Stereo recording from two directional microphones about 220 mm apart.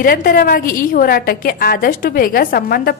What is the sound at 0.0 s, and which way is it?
A woman's voice, 40° left (ahead or behind).